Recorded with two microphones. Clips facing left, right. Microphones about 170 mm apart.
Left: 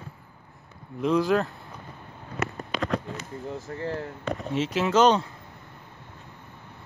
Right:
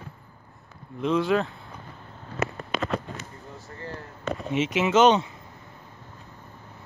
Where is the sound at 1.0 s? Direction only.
Centre (ahead or behind).